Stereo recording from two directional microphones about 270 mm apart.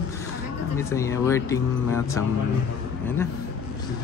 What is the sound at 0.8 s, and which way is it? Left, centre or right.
Speech, centre.